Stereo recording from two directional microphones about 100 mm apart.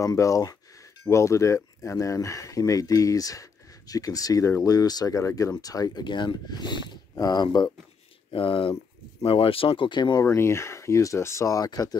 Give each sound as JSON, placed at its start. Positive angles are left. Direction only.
{"t": 0.0, "sound": "speech", "side_deg": 35}
{"t": 8.3, "sound": "speech", "side_deg": 60}
{"t": 10.2, "sound": "speech", "side_deg": 25}